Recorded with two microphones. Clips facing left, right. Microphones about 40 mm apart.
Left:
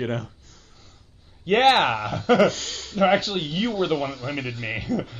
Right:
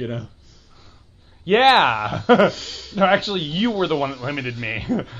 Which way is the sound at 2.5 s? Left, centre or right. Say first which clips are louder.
Left 1 dB; left.